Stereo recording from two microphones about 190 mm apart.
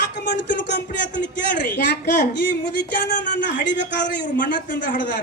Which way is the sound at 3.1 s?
45° left (ahead or behind).